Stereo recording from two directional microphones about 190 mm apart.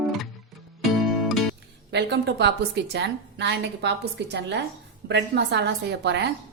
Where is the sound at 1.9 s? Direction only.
65° right (ahead or behind).